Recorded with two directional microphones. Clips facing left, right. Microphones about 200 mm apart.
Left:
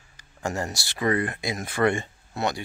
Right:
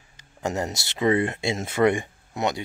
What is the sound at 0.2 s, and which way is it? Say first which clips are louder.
Speech: right 2 dB; 20° right (ahead or behind).